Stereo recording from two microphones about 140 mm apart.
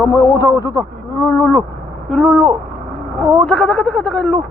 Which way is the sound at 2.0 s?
Centre (ahead or behind).